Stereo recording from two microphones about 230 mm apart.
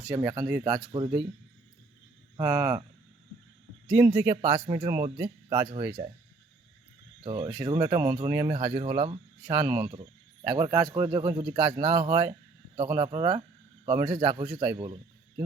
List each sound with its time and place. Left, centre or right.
0.1 s speech: centre
0.6 s speech: right
2.3 s speech: centre
3.8 s speech: centre
4.5 s speech: right
7.3 s speech: centre
9.6 s speech: centre